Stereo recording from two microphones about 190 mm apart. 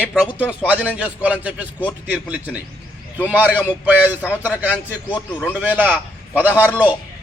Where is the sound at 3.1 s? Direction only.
10° right (ahead or behind).